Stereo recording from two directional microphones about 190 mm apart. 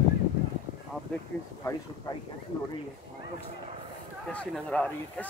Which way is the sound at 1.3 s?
5° left (ahead or behind).